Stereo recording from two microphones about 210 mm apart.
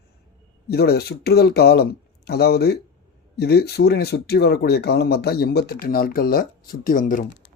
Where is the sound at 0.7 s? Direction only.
50° left (ahead or behind).